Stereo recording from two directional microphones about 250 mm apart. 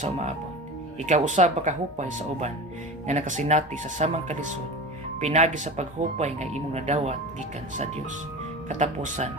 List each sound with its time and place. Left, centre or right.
0.0 s speech: right
8.7 s speech: right